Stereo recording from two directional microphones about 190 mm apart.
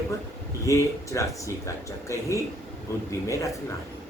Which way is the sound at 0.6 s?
15° left (ahead or behind).